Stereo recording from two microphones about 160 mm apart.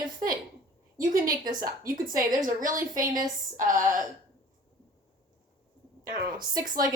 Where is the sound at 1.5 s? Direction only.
60° right (ahead or behind).